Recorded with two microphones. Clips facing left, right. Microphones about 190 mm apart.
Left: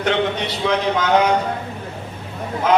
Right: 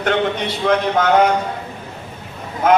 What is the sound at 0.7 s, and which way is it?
Speech, 50° right (ahead or behind).